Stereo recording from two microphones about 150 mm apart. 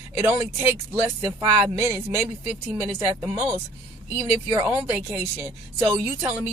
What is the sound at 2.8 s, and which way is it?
Speech, 15° right (ahead or behind).